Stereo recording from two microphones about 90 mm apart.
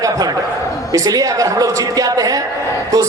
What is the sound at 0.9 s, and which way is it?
A man's voice, 40° right (ahead or behind).